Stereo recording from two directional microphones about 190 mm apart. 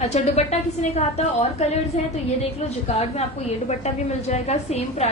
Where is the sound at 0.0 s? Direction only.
35° left (ahead or behind).